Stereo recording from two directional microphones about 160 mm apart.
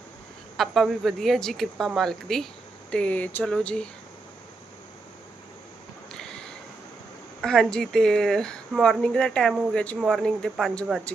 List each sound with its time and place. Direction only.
0.5 s speech: centre (ahead or behind)
6.1 s a sound: 5° left (ahead or behind)
7.4 s speech: 5° left (ahead or behind)